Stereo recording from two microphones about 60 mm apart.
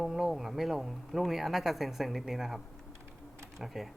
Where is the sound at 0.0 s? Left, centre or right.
Centre.